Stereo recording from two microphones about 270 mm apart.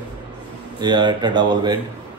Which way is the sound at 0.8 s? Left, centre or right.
Centre.